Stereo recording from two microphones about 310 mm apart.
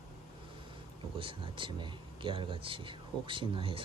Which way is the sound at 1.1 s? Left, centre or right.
Centre.